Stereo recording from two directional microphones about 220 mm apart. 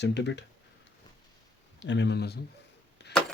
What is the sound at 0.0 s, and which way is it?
Speech, 50° left (ahead or behind).